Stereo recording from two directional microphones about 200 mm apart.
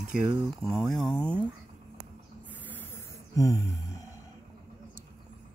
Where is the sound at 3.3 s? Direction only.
15° left (ahead or behind).